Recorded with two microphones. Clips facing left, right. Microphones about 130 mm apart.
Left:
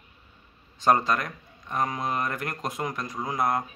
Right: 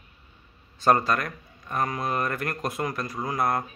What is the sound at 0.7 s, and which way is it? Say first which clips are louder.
Speech: right 1 dB; 20° left (ahead or behind).